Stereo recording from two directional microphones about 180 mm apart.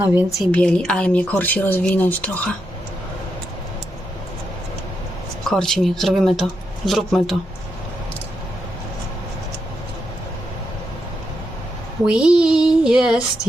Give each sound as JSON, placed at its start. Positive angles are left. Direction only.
{"t": 0.0, "sound": "a woman's voice", "side_deg": -10}
{"t": 0.3, "sound": "speech", "side_deg": 5}
{"t": 5.5, "sound": "speech", "side_deg": 5}
{"t": 12.0, "sound": "speech", "side_deg": -5}